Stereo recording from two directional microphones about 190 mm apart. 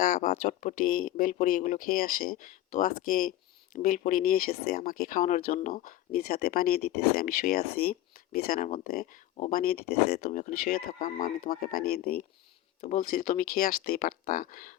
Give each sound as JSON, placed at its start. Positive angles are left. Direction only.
{"t": 0.0, "sound": "speech", "side_deg": 45}
{"t": 10.2, "sound": "speech", "side_deg": 40}
{"t": 12.8, "sound": "speech", "side_deg": 40}